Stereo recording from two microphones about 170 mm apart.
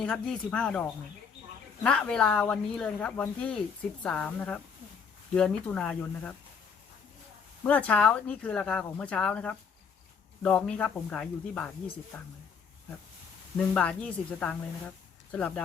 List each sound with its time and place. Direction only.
0.0 s speech: 5° left (ahead or behind)
7.6 s speech: 10° left (ahead or behind)
13.7 s speech: 5° left (ahead or behind)